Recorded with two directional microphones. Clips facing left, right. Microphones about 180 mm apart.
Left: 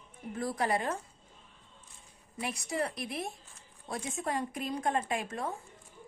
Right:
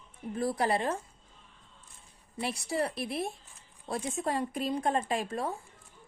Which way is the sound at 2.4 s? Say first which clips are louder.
Right 2 dB; 30° right (ahead or behind).